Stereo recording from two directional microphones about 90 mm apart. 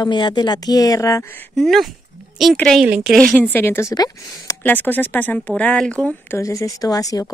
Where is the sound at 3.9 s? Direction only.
45° left (ahead or behind).